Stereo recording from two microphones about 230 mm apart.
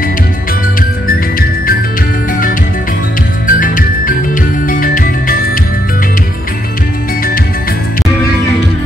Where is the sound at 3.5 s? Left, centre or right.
Left.